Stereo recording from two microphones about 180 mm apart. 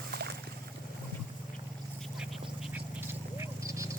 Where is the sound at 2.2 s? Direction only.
5° right (ahead or behind).